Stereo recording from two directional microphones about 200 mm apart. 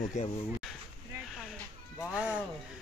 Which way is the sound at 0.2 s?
35° left (ahead or behind).